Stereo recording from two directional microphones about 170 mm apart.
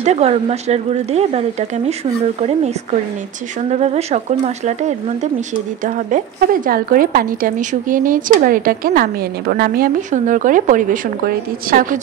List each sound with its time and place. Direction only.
0.0 s speech: 40° right (ahead or behind)
3.7 s a woman's voice: 40° right (ahead or behind)